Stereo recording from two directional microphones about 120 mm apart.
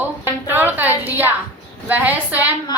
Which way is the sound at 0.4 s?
15° right (ahead or behind).